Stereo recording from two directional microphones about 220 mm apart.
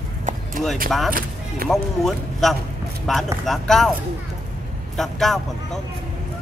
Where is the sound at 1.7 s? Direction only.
Centre (ahead or behind).